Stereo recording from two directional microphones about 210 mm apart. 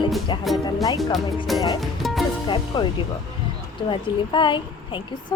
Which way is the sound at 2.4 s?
20° left (ahead or behind).